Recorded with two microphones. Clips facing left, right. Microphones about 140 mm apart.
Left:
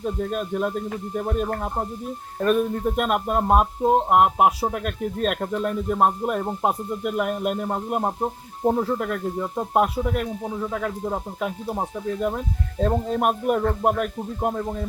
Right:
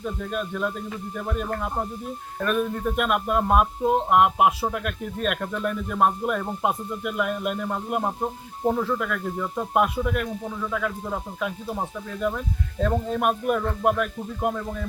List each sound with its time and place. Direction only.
0.0 s speech: 35° left (ahead or behind)
12.8 s speech: 35° left (ahead or behind)